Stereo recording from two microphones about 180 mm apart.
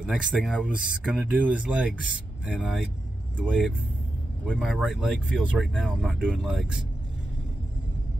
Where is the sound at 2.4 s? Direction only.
5° right (ahead or behind).